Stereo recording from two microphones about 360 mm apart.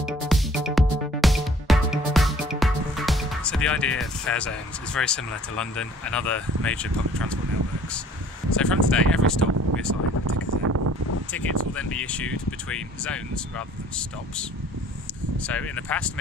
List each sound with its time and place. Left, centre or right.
0.0 s music: centre
4.9 s speech: centre
8.5 s speech: centre
9.9 s speech: right
10.2 s a sound: right
11.3 s speech: centre